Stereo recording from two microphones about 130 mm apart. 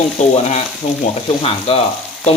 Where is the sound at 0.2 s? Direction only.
65° left (ahead or behind).